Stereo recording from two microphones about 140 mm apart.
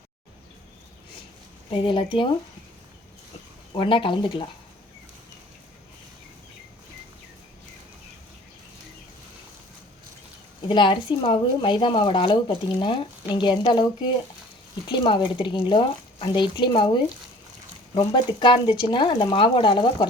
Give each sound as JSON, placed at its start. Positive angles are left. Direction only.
{"t": 1.7, "sound": "speech", "side_deg": 35}
{"t": 3.8, "sound": "speech", "side_deg": 35}
{"t": 10.7, "sound": "speech", "side_deg": 35}